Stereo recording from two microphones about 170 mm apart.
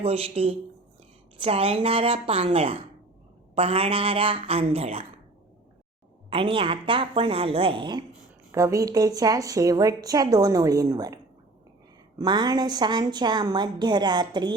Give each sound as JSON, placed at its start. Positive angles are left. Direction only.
{"t": 0.0, "sound": "a woman's voice", "side_deg": -35}
{"t": 6.3, "sound": "a woman's voice", "side_deg": -30}
{"t": 8.5, "sound": "a woman's voice", "side_deg": -15}
{"t": 12.2, "sound": "a woman's voice", "side_deg": -25}